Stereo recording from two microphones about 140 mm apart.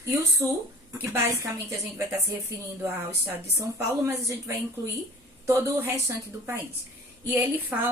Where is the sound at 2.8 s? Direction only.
20° right (ahead or behind).